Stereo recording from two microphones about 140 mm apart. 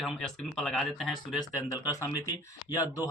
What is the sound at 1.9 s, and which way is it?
Speech, 25° left (ahead or behind).